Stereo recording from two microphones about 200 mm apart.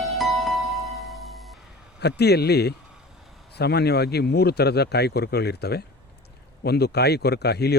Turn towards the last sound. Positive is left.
turn(degrees=55)  # may be behind; listen again after turning